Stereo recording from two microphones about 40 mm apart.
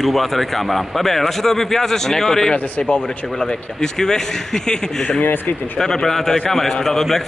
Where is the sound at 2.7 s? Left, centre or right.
Left.